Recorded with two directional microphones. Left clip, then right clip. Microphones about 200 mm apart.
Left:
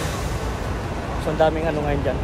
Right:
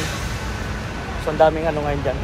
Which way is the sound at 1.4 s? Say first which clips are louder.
Right 3 dB; centre (ahead or behind).